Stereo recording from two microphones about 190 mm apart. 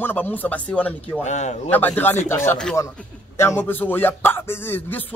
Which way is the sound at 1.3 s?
40° left (ahead or behind).